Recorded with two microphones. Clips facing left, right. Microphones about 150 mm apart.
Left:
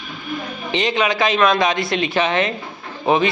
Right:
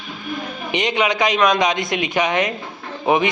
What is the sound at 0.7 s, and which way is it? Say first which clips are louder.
Speech: even; 20° right (ahead or behind).